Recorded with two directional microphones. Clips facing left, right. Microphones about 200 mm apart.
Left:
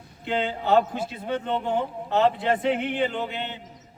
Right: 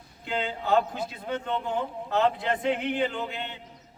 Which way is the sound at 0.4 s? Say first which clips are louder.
Left 3 dB; 5° left (ahead or behind).